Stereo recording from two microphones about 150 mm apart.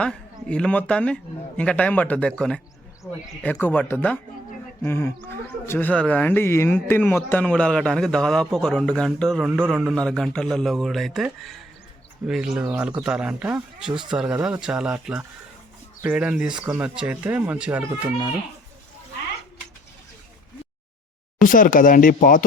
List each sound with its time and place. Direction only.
0.0 s a man's voice: 5° left (ahead or behind); by 18.1 s 10° right (ahead or behind)
21.4 s speech: 65° left (ahead or behind)